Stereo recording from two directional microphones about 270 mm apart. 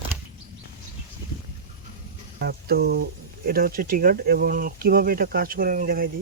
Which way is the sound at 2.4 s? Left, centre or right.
Right.